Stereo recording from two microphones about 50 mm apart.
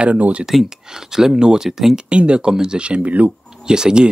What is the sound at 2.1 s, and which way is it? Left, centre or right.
Speech, right.